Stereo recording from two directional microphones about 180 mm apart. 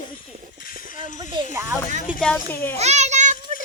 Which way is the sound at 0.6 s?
50° left (ahead or behind).